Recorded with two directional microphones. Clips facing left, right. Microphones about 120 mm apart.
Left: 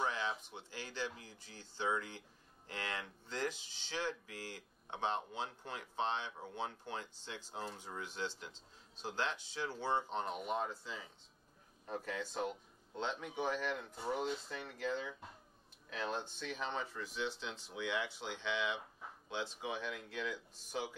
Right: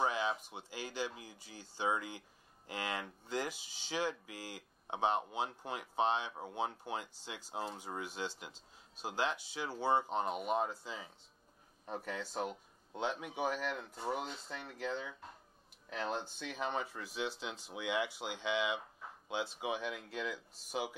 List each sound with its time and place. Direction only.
0.0 s speech: 15° right (ahead or behind)
16.3 s speech: 10° right (ahead or behind)